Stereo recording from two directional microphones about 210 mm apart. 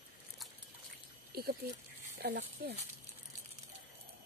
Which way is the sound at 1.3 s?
45° right (ahead or behind).